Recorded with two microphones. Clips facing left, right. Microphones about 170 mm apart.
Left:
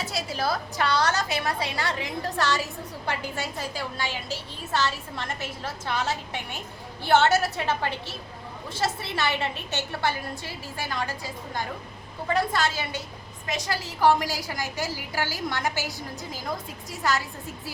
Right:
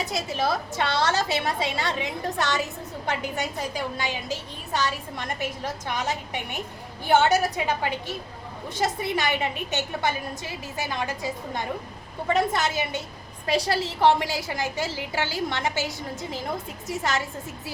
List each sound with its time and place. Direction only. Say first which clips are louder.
0.0 s a woman's voice: right 2 dB; 20° right (ahead or behind)
13.5 s a woman's voice: right 6 dB; 30° right (ahead or behind)